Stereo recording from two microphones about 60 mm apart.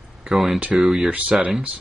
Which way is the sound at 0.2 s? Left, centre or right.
Centre.